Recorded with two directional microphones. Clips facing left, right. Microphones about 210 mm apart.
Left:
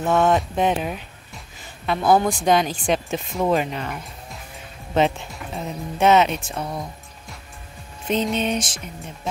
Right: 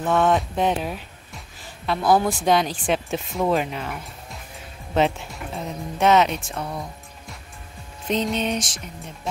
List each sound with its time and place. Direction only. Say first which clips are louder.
0.0 s speech: left 1 dB; centre (ahead or behind)
6.5 s speech: left 1 dB; 20° left (ahead or behind)
8.1 s speech: left 1 dB; centre (ahead or behind)